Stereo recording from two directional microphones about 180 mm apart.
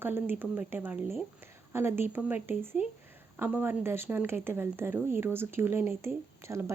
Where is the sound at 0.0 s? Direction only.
10° right (ahead or behind).